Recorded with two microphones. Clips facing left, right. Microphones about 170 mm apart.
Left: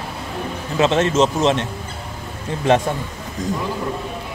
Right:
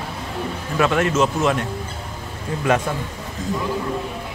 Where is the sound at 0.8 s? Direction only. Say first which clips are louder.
Left 2 dB; 25° left (ahead or behind).